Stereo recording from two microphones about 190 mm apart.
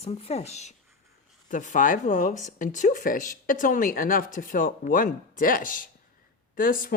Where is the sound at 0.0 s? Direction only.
35° left (ahead or behind).